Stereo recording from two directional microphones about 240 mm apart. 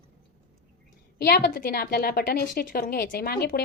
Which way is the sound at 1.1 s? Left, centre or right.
Left.